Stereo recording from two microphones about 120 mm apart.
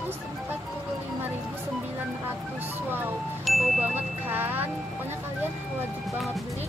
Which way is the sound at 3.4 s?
Centre (ahead or behind).